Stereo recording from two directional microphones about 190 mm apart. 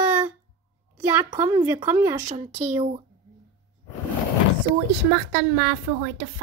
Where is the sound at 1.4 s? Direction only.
15° right (ahead or behind).